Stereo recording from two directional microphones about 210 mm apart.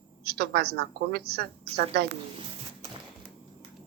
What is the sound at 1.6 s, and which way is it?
Speech, 30° right (ahead or behind).